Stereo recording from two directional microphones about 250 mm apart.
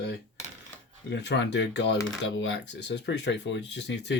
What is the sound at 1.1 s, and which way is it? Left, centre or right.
Speech, left.